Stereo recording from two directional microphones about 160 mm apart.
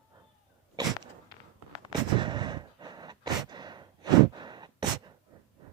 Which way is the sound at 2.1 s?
30° right (ahead or behind).